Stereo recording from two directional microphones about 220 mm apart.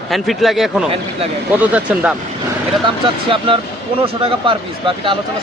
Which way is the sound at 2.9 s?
25° right (ahead or behind).